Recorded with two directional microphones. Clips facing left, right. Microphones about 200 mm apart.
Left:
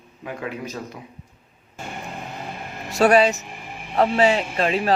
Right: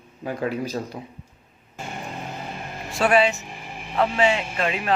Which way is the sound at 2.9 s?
40° left (ahead or behind).